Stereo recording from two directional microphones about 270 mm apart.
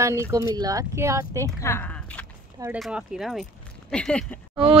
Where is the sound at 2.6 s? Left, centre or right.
Centre.